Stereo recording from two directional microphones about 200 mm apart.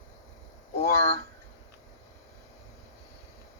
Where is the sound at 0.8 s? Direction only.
35° left (ahead or behind).